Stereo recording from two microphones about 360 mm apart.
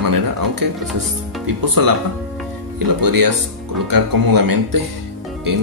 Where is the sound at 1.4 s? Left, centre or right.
Right.